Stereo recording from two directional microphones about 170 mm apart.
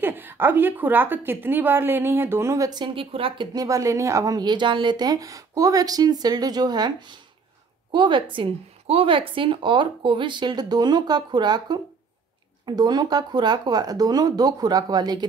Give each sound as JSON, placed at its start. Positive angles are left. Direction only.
{"t": 0.0, "sound": "a woman's voice", "side_deg": -10}